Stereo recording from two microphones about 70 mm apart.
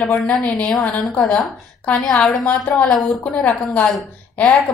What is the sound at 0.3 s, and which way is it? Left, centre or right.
A woman's voice, centre.